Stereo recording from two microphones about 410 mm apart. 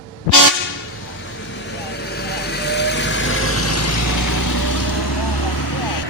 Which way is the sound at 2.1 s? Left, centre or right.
Left.